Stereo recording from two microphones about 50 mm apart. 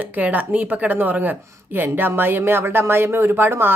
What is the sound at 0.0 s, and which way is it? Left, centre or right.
Speech, right.